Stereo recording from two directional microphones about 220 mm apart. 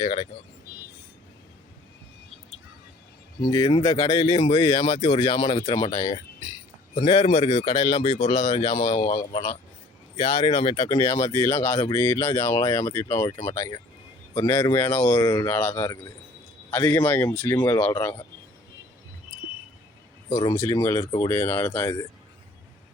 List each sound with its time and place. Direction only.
0.0 s speech: 25° left (ahead or behind)
3.5 s speech: 25° left (ahead or behind)
20.3 s speech: 15° left (ahead or behind)